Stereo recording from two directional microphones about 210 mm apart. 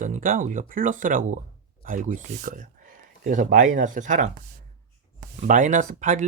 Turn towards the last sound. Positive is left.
turn(degrees=-35)  # may be behind; listen again after turning